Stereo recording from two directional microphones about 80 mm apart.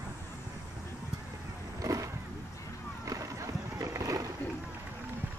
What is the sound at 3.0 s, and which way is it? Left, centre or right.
Boat, right.